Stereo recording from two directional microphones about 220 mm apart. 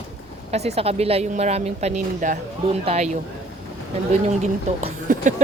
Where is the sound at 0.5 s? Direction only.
30° right (ahead or behind).